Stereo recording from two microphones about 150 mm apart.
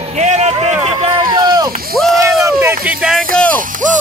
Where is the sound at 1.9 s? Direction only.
Centre (ahead or behind).